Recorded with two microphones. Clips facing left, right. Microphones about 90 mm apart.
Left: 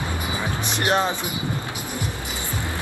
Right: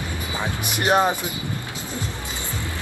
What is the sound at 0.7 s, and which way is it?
Speech, 10° right (ahead or behind).